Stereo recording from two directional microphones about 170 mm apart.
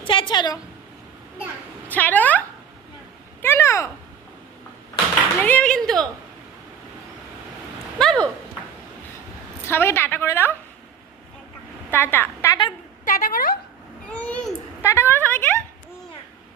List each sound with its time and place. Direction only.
0.0 s a woman's voice: 30° left (ahead or behind)
1.9 s a woman's voice: 10° left (ahead or behind)
3.4 s speech: 15° left (ahead or behind)
5.4 s speech: 10° left (ahead or behind)
7.9 s speech: 5° left (ahead or behind)
9.6 s a woman's voice: 15° left (ahead or behind)
11.9 s a woman's voice: 15° left (ahead or behind)
13.1 s a woman's voice: 50° left (ahead or behind)
14.1 s a woman's voice: 5° left (ahead or behind)